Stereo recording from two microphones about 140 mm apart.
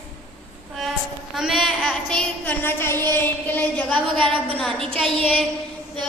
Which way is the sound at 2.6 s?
15° left (ahead or behind).